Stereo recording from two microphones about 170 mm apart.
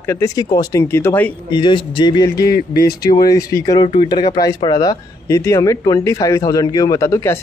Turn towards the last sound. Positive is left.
turn(degrees=15)  # may be behind; listen again after turning